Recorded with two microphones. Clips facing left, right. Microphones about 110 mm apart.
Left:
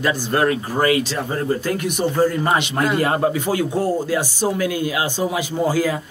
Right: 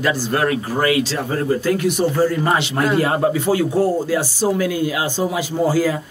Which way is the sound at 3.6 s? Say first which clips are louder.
Right 3 dB; 10° right (ahead or behind).